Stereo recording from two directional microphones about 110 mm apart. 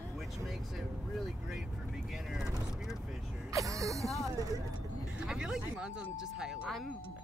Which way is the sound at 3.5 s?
30° right (ahead or behind).